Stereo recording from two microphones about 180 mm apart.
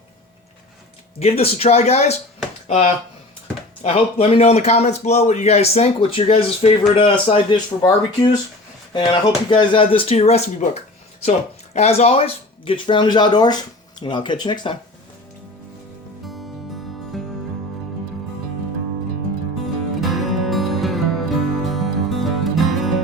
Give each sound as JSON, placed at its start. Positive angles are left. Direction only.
{"t": 1.2, "sound": "speech", "side_deg": 35}
{"t": 16.2, "sound": "music", "side_deg": 0}
{"t": 20.0, "sound": "music", "side_deg": 0}